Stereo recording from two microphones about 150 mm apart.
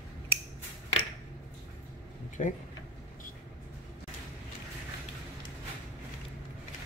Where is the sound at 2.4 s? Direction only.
55° left (ahead or behind).